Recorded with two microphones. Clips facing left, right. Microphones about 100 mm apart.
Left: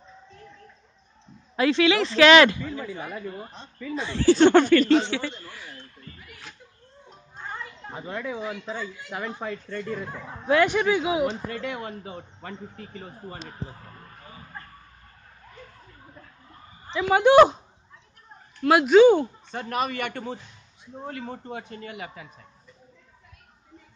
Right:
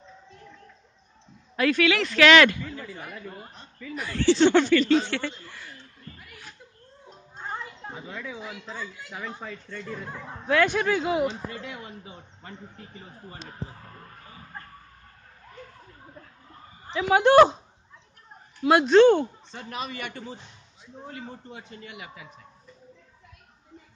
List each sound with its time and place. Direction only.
1.6 s speech: 25° left (ahead or behind)
2.7 s a man's voice: 65° left (ahead or behind)
3.9 s speech: 25° left (ahead or behind)
4.3 s speech: 50° left (ahead or behind)
5.0 s speech: 10° left (ahead or behind)
7.3 s a sound: 15° right (ahead or behind)
7.9 s a man's voice: 60° left (ahead or behind)
10.6 s speech: 5° left (ahead or behind)
11.2 s speech: 60° left (ahead or behind)
17.2 s speech: 10° left (ahead or behind)
18.6 s speech: 5° left (ahead or behind)
19.5 s a man's voice: 55° left (ahead or behind)